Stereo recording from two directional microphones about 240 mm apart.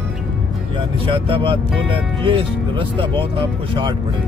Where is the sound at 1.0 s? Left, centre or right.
Right.